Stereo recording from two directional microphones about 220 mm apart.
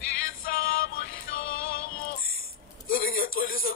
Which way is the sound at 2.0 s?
40° left (ahead or behind).